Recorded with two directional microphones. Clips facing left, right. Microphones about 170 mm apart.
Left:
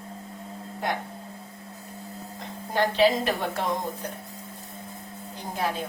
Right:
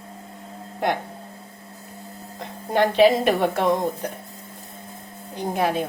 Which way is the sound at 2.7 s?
60° right (ahead or behind).